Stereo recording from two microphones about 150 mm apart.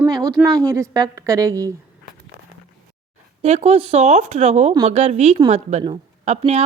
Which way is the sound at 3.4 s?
45° right (ahead or behind).